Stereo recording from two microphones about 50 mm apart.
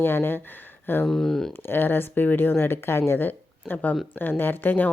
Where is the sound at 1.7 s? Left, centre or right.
Left.